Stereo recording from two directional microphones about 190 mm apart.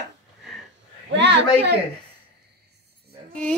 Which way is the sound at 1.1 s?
65° right (ahead or behind).